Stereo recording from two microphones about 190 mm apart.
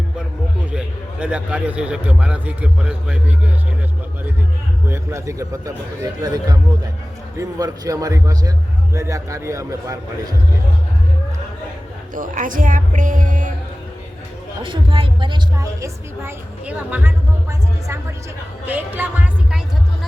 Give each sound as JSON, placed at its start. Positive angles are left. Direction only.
{"t": 0.6, "sound": "a man's voice", "side_deg": -5}
{"t": 4.9, "sound": "a man's voice", "side_deg": -15}
{"t": 12.1, "sound": "speech", "side_deg": -45}
{"t": 14.6, "sound": "a man's voice", "side_deg": -25}
{"t": 18.6, "sound": "a man's voice", "side_deg": -10}